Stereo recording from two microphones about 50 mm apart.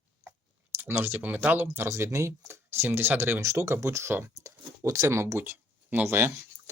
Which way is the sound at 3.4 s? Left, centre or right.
Right.